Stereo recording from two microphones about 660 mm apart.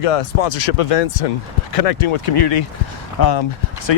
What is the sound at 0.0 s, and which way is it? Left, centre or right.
Speech, left.